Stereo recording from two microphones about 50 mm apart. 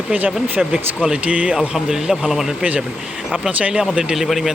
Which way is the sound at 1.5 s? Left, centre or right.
Centre.